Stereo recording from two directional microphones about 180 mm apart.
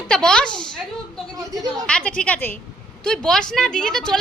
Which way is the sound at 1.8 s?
5° left (ahead or behind).